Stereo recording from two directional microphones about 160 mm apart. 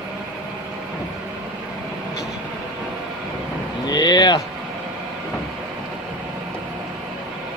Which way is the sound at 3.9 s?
25° left (ahead or behind).